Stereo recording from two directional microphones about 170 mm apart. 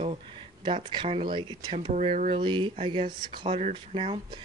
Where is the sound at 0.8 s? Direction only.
30° right (ahead or behind).